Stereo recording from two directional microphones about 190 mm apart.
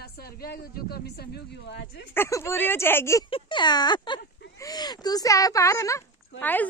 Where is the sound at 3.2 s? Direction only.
25° left (ahead or behind).